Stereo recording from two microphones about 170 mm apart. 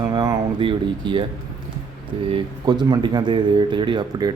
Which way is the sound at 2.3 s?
25° right (ahead or behind).